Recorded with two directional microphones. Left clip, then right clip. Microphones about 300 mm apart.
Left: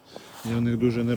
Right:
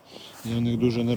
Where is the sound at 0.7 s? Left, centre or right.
Centre.